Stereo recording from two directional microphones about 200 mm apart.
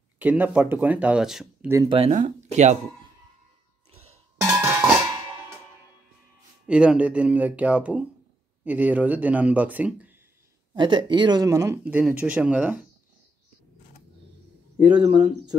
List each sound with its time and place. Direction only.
0.2 s speech: 10° right (ahead or behind)
1.9 s speech: 30° right (ahead or behind)
4.4 s music: 15° right (ahead or behind)
6.6 s speech: 5° right (ahead or behind)
10.7 s speech: 25° right (ahead or behind); by 12.8 s 5° right (ahead or behind)
14.9 s speech: 20° right (ahead or behind)